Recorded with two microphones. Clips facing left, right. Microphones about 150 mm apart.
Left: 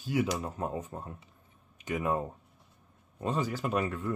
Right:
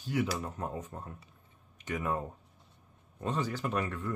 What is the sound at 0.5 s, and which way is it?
Speech, 25° left (ahead or behind).